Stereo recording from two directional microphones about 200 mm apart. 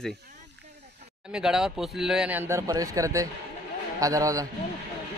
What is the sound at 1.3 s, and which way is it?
A man's voice, 5° right (ahead or behind).